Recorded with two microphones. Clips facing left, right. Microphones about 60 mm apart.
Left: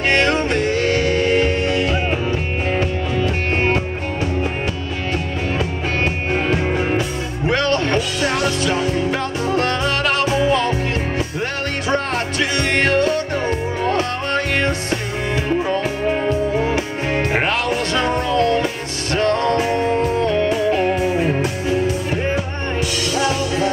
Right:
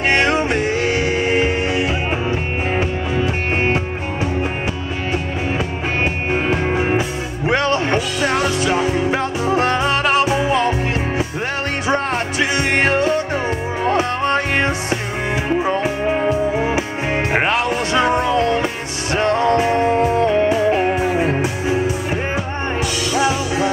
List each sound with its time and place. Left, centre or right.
0.1 s music: centre
6.5 s music: centre
8.2 s music: centre
11.9 s music: centre